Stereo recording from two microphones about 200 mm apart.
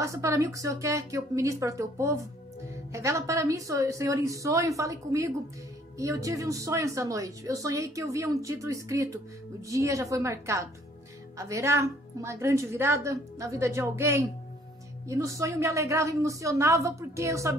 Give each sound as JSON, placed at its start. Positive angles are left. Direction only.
{"t": 0.0, "sound": "a woman's voice", "side_deg": -15}